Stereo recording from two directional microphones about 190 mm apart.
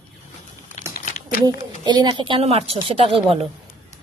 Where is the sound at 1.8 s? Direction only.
20° right (ahead or behind).